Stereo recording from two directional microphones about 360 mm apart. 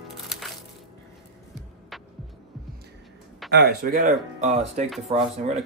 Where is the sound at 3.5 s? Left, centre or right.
Right.